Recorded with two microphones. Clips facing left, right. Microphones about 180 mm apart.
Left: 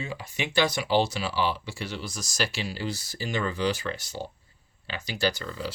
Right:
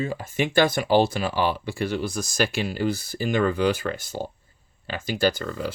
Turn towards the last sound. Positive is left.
turn(degrees=-50)  # may be behind; listen again after turning